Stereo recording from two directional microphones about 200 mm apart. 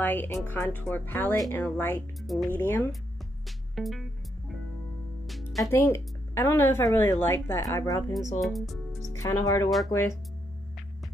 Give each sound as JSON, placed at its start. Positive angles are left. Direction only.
{"t": 0.0, "sound": "speech", "side_deg": 10}
{"t": 3.7, "sound": "music", "side_deg": 0}
{"t": 5.6, "sound": "speech", "side_deg": 10}
{"t": 8.4, "sound": "speech", "side_deg": 0}
{"t": 9.1, "sound": "speech", "side_deg": 15}